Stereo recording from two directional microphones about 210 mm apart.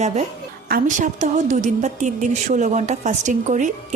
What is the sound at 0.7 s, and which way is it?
A woman's voice, 35° right (ahead or behind).